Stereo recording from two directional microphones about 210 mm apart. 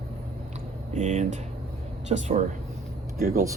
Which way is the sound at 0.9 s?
35° right (ahead or behind).